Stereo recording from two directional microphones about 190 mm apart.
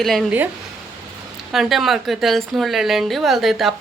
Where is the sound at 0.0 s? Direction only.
Centre (ahead or behind).